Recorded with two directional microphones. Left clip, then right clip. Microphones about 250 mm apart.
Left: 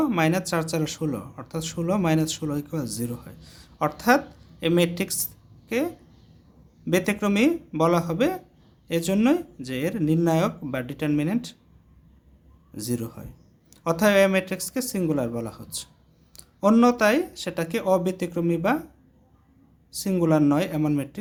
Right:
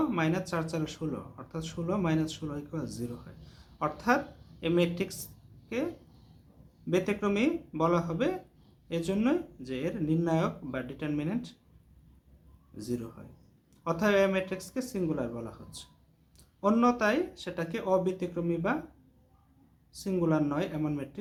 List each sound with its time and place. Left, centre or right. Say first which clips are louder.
0.0 s speech: left 7 dB; left
6.9 s speech: left 5 dB; left
12.7 s speech: left 6 dB; left
19.9 s speech: left 7 dB; left